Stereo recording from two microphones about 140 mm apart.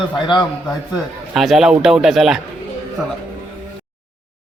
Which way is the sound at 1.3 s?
Centre (ahead or behind).